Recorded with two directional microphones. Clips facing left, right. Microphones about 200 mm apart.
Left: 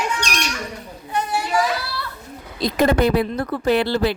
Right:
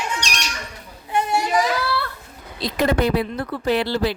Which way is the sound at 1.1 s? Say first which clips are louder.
Right 2 dB; 20° right (ahead or behind).